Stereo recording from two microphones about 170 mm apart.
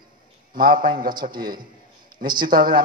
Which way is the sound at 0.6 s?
55° right (ahead or behind).